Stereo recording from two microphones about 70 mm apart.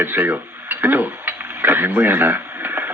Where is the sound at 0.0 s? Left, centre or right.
Right.